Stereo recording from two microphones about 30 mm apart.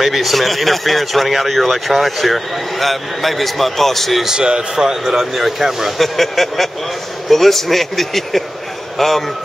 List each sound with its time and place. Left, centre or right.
0.0 s speech: centre
4.3 s speech: right
5.0 s speech: centre
5.9 s a man's voice: centre